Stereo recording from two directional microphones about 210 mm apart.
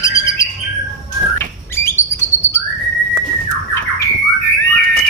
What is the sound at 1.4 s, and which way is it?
Bird, 10° left (ahead or behind).